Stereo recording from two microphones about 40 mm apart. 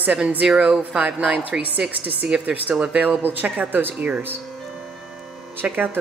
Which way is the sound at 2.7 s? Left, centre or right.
Centre.